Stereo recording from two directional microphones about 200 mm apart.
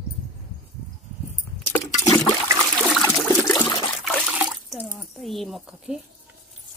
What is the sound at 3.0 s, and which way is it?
Toilet flush, 15° left (ahead or behind).